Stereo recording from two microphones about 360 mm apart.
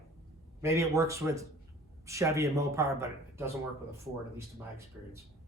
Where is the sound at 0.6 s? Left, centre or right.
Centre.